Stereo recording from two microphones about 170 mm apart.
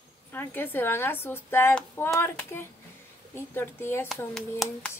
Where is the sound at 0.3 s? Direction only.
10° left (ahead or behind).